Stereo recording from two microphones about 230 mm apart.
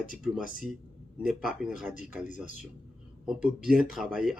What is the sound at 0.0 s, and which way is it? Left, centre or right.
Speech, left.